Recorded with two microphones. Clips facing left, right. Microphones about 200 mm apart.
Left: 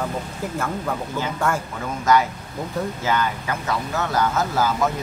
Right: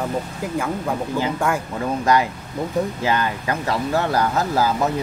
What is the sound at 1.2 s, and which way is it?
Speech, 15° right (ahead or behind).